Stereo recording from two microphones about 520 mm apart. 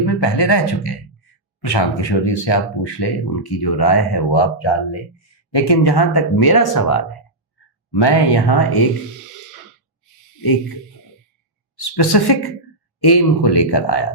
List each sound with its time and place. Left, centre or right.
0.0 s speech: left
10.4 s speech: left
11.8 s speech: left